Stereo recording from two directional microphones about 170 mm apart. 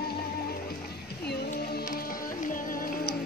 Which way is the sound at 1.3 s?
65° left (ahead or behind).